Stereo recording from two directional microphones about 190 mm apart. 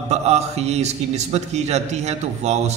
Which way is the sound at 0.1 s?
35° right (ahead or behind).